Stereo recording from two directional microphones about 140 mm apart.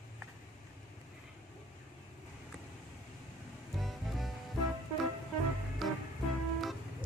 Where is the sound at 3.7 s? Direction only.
Centre (ahead or behind).